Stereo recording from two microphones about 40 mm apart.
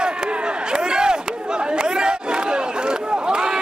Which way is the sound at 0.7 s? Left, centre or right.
Right.